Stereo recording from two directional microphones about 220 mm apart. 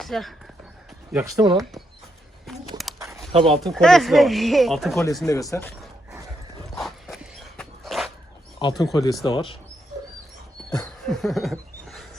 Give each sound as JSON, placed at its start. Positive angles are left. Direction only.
{"t": 0.0, "sound": "speech", "side_deg": 0}
{"t": 1.1, "sound": "speech", "side_deg": -15}
{"t": 2.5, "sound": "a sound", "side_deg": 0}
{"t": 3.3, "sound": "speech", "side_deg": -25}
{"t": 3.6, "sound": "speech", "side_deg": 0}
{"t": 5.2, "sound": "speech", "side_deg": 15}
{"t": 6.7, "sound": "dog", "side_deg": 0}
{"t": 8.5, "sound": "speech", "side_deg": 15}
{"t": 10.8, "sound": "a sound", "side_deg": 0}